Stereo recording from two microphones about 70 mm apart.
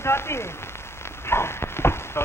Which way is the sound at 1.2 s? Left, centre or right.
Left.